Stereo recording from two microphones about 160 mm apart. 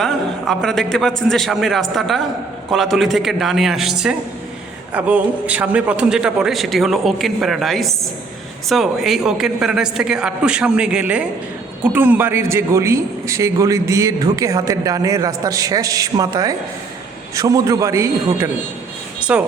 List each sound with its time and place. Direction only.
0.0 s a man's voice: 5° left (ahead or behind); by 18.5 s 15° right (ahead or behind)
19.2 s speech: 5° right (ahead or behind)